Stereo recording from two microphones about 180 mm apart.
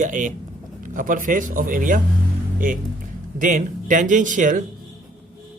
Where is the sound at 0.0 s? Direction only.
45° right (ahead or behind).